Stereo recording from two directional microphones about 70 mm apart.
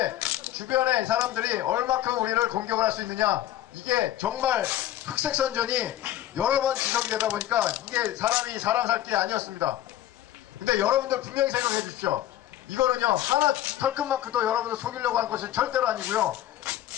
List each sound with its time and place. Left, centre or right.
0.0 s speech: right